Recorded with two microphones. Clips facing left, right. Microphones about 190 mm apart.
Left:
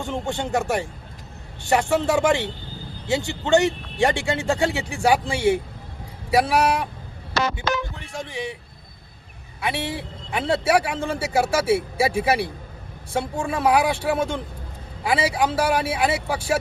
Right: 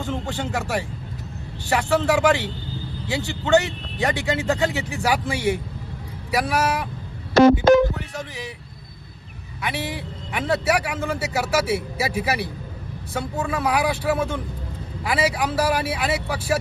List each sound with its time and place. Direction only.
0.1 s a man's voice: 20° left (ahead or behind)
7.3 s speech: 50° right (ahead or behind)
8.1 s a man's voice: 25° left (ahead or behind)
9.6 s a man's voice: 30° left (ahead or behind)